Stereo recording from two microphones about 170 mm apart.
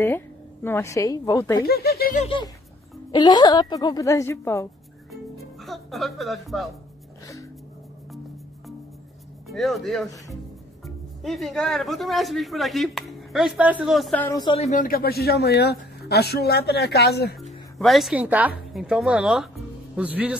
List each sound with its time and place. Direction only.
0.7 s a woman's voice: 15° left (ahead or behind)
1.6 s speech: 65° left (ahead or behind)
2.1 s a woman's voice: 35° left (ahead or behind); by 4.6 s 15° left (ahead or behind)
5.4 s speech: centre (ahead or behind)
9.5 s speech: centre (ahead or behind)
14.4 s speech: 30° left (ahead or behind)
14.7 s speech: 55° left (ahead or behind)
17.4 s speech: centre (ahead or behind)